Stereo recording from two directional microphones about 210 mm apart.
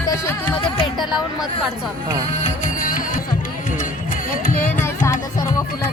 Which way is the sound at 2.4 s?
40° left (ahead or behind).